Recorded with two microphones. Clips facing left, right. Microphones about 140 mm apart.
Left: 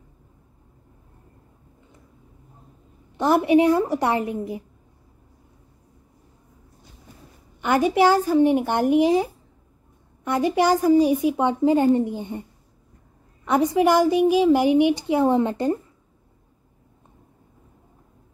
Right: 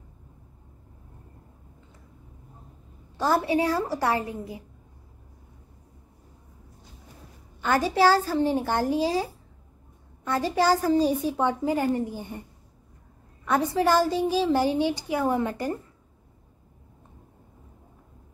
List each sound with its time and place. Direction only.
3.2 s a woman's voice: 20° left (ahead or behind)
7.6 s a woman's voice: 15° left (ahead or behind)
13.5 s a woman's voice: 15° left (ahead or behind)